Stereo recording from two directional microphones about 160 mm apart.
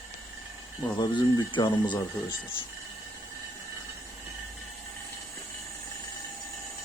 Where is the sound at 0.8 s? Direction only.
30° left (ahead or behind).